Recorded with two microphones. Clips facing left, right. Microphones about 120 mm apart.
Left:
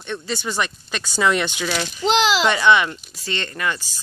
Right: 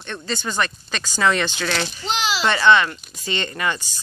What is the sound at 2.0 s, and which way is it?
Speech, 90° left.